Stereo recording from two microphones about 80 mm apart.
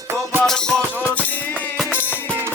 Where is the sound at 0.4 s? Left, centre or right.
Centre.